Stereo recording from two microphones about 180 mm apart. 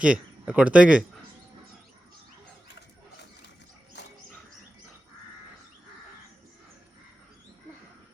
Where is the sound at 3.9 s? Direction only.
75° left (ahead or behind).